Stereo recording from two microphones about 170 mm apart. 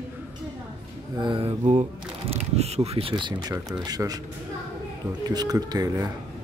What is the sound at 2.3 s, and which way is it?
Speech, 40° right (ahead or behind).